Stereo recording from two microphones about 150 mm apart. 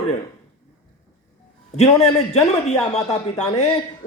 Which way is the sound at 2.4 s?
50° left (ahead or behind).